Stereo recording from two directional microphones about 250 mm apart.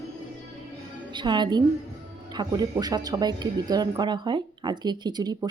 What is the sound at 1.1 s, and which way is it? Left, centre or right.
A woman's voice, centre.